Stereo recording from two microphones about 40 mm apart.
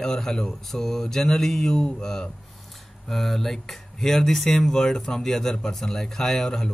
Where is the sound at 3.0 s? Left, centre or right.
Centre.